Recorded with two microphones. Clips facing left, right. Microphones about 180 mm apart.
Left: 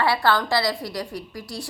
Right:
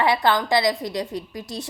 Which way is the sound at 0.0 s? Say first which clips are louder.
Right 1 dB; 20° right (ahead or behind).